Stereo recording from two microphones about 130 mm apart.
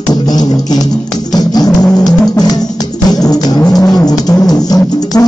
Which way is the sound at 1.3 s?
30° left (ahead or behind).